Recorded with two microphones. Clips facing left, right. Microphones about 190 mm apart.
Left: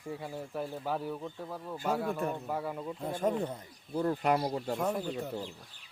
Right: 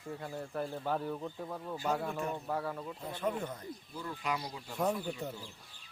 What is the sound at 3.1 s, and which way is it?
Speech, 45° left (ahead or behind).